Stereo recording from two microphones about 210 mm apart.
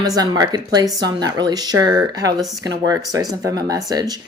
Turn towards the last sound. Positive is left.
turn(degrees=-20)  # may be behind; listen again after turning